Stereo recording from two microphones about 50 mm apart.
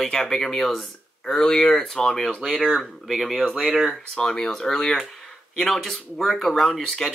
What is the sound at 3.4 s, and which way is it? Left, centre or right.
Speech, centre.